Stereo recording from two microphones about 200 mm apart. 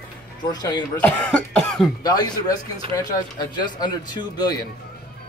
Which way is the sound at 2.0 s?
20° left (ahead or behind).